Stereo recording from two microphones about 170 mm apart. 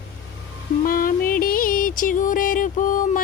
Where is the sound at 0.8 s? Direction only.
55° left (ahead or behind).